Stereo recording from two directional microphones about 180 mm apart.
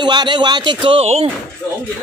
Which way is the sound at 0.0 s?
25° right (ahead or behind).